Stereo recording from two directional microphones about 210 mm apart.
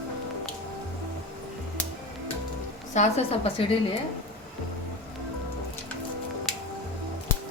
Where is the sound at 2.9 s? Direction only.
30° left (ahead or behind).